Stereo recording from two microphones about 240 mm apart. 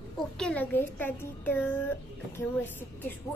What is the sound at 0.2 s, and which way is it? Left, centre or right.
A child's voice, centre.